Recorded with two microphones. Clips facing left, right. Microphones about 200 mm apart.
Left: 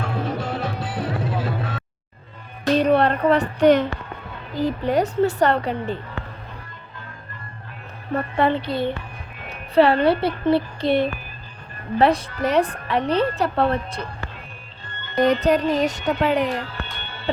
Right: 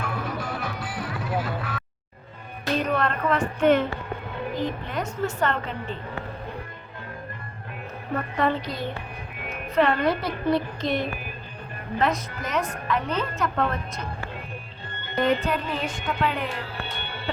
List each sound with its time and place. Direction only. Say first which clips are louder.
0.0 s music: left 5 dB; 30° left (ahead or behind)
2.7 s a woman's voice: left 7 dB; 35° left (ahead or behind)
8.1 s a woman's voice: left 4 dB; 30° left (ahead or behind)
15.2 s a woman's voice: left 6 dB; 40° left (ahead or behind)